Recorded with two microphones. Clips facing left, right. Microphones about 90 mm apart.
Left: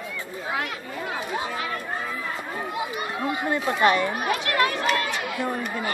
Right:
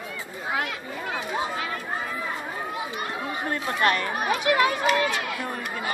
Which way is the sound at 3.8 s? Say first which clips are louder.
Left 3 dB; 15° left (ahead or behind).